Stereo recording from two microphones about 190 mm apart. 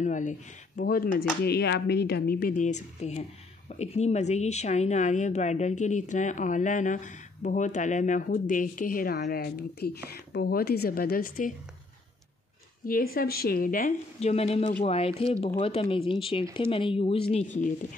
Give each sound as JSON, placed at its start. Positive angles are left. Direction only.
{"t": 0.0, "sound": "speech", "side_deg": 40}
{"t": 1.4, "sound": "a woman's voice", "side_deg": 60}
{"t": 12.8, "sound": "a woman's voice", "side_deg": 50}